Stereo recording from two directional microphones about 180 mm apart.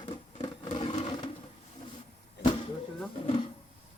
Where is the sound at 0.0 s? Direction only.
30° left (ahead or behind).